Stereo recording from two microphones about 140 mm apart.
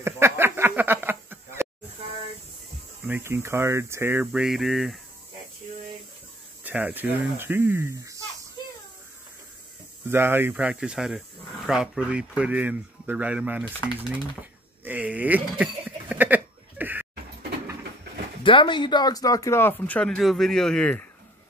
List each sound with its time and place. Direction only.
0.0 s a sound: 15° right (ahead or behind)
3.1 s speech: 15° right (ahead or behind)
4.3 s a sound: 5° right (ahead or behind)
6.6 s speech: 10° right (ahead or behind)
10.0 s speech: 15° right (ahead or behind)
13.9 s pigeon: 10° right (ahead or behind)
18.4 s speech: 35° left (ahead or behind); by 21.1 s 10° left (ahead or behind)